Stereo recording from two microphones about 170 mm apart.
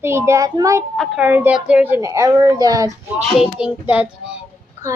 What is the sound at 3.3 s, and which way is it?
Speech, 5° right (ahead or behind).